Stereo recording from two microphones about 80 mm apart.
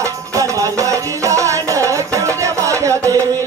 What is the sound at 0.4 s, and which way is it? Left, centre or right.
Music, right.